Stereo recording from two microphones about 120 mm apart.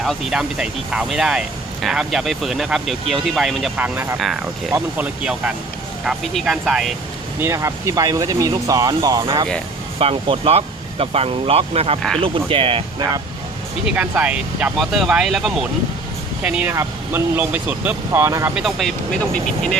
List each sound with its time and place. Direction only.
0.0 s speech: 5° right (ahead or behind)
3.8 s speech: 15° right (ahead or behind)
7.3 s speech: 25° right (ahead or behind)
10.0 s speech: 55° right (ahead or behind)
13.8 s speech: 10° right (ahead or behind)
18.5 s speech: centre (ahead or behind)